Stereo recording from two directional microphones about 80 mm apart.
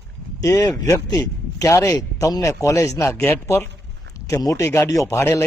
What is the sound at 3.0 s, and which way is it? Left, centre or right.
Speech, left.